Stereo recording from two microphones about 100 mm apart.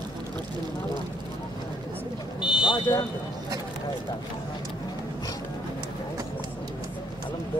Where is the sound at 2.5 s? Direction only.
55° left (ahead or behind).